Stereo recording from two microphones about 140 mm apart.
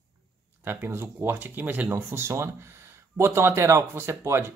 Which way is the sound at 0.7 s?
15° right (ahead or behind).